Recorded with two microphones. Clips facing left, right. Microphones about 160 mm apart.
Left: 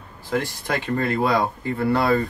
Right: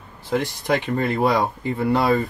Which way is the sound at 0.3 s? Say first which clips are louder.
Right 3 dB; 20° right (ahead or behind).